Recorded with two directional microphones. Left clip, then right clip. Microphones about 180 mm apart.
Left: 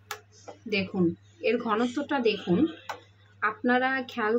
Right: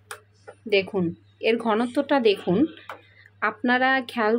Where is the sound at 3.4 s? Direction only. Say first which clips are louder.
Right 3 dB; 50° right (ahead or behind).